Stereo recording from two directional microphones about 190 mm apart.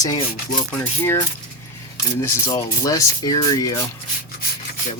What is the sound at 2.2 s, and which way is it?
Speech, 15° left (ahead or behind).